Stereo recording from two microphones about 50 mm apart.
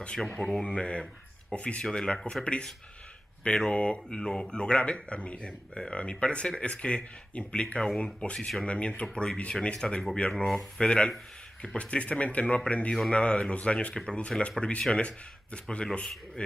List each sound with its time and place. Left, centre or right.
0.4 s speech: centre
0.7 s speech: left
8.0 s speech: left
10.3 s speech: centre
10.8 s speech: centre